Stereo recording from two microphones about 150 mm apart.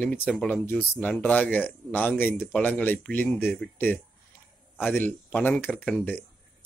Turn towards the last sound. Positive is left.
turn(degrees=10)  # may be behind; listen again after turning